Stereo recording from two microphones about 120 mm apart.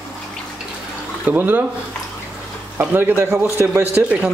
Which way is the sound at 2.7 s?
15° right (ahead or behind).